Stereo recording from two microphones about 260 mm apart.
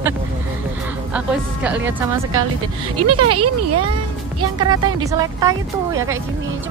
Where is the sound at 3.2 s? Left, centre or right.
Right.